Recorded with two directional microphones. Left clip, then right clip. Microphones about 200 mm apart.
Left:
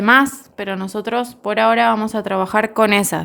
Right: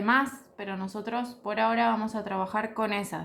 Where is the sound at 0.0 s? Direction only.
55° left (ahead or behind).